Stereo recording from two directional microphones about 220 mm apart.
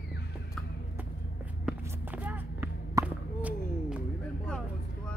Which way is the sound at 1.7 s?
5° right (ahead or behind).